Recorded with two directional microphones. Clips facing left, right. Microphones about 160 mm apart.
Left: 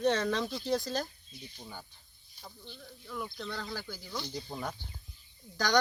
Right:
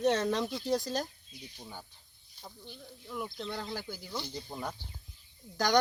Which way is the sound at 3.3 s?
25° right (ahead or behind).